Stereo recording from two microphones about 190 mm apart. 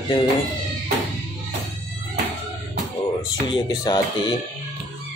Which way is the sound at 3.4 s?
25° left (ahead or behind).